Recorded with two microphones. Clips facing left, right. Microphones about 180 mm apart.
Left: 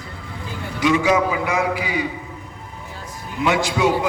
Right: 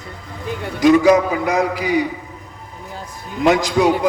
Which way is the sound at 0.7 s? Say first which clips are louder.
Right 6 dB; 40° right (ahead or behind).